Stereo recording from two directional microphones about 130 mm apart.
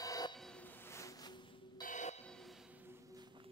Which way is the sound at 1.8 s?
70° left (ahead or behind).